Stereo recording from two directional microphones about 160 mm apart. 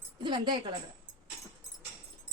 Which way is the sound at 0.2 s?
30° right (ahead or behind).